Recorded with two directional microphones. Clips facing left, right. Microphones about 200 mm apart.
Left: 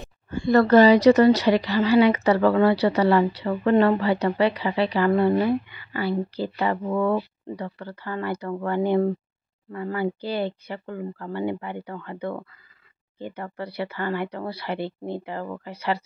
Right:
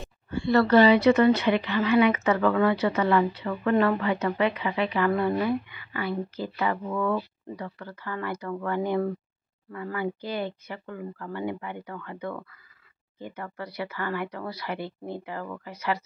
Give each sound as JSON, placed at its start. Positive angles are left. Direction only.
{"t": 0.3, "sound": "speech", "side_deg": 45}